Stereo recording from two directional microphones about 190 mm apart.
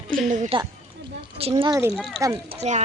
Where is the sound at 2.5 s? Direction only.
35° right (ahead or behind).